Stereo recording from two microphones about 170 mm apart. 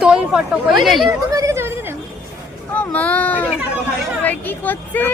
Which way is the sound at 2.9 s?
10° left (ahead or behind).